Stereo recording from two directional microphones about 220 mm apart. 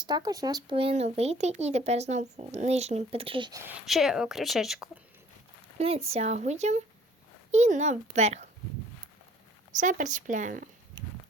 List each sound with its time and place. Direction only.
0.0 s speech: 20° right (ahead or behind); by 4.9 s centre (ahead or behind)
6.1 s speech: 30° right (ahead or behind)
9.8 s speech: 35° right (ahead or behind)